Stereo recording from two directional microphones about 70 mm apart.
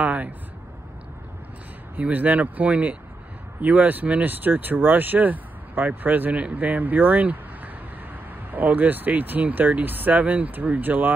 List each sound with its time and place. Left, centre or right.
0.0 s speech: right
2.0 s speech: right